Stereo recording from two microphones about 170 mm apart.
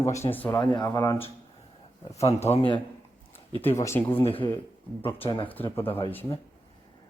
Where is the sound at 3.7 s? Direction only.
15° left (ahead or behind).